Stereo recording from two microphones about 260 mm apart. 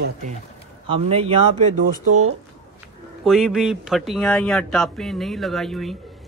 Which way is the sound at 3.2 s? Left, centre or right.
Centre.